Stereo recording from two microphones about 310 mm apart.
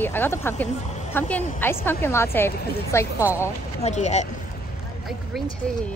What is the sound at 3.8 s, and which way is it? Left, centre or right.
Speech, left.